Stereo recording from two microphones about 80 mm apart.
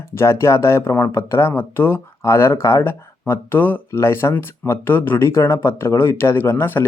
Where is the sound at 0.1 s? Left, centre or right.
Left.